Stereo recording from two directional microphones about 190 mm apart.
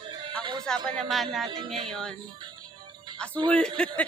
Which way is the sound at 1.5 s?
25° right (ahead or behind).